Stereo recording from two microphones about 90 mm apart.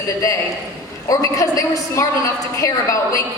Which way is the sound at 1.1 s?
40° left (ahead or behind).